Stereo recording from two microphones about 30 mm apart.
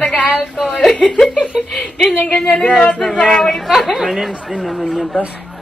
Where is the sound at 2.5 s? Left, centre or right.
Left.